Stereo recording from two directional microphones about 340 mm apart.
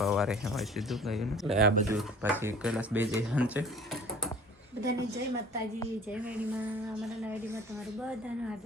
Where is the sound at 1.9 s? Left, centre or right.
Centre.